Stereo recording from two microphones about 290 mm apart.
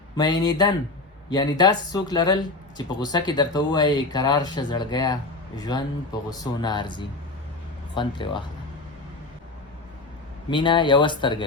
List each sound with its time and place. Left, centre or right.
0.2 s speech: centre
10.5 s speech: centre